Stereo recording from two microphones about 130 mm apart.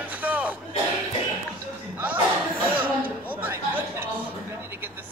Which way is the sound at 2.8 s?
15° right (ahead or behind).